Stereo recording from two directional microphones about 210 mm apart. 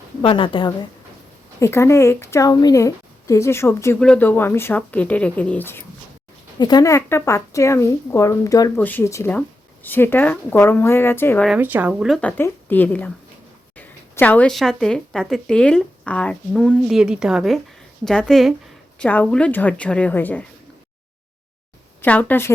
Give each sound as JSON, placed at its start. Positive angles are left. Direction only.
{"t": 0.2, "sound": "a woman's voice", "side_deg": 25}
{"t": 1.5, "sound": "a woman's voice", "side_deg": 15}
{"t": 11.4, "sound": "a woman's voice", "side_deg": -5}
{"t": 22.0, "sound": "a woman's voice", "side_deg": 5}